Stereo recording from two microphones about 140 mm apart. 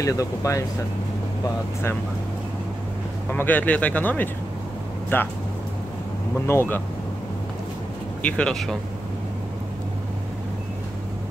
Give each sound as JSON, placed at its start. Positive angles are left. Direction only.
{"t": 0.0, "sound": "speech", "side_deg": 25}
{"t": 3.3, "sound": "speech", "side_deg": 15}
{"t": 6.4, "sound": "speech", "side_deg": 15}
{"t": 8.2, "sound": "speech", "side_deg": 10}